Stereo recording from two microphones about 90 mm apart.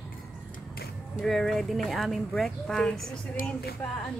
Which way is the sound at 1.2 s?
5° left (ahead or behind).